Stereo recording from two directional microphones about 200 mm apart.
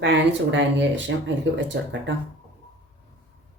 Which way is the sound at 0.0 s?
60° right (ahead or behind).